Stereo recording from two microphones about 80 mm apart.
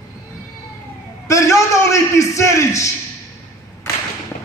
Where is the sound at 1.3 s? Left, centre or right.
Left.